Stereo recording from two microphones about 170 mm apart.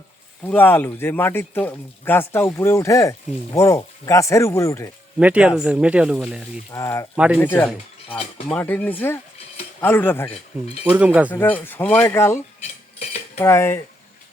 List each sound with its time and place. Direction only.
0.4 s speech: 10° left (ahead or behind)
5.2 s speech: 5° right (ahead or behind)
6.7 s speech: 15° left (ahead or behind)
7.2 s speech: 5° right (ahead or behind)
7.4 s speech: 10° left (ahead or behind)
10.8 s speech: 10° right (ahead or behind)
11.3 s speech: 10° left (ahead or behind)
13.0 s cutlery: 40° left (ahead or behind)
13.4 s speech: 15° left (ahead or behind)